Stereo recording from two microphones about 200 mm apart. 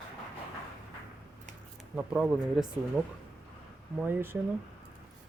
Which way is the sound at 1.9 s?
5° right (ahead or behind).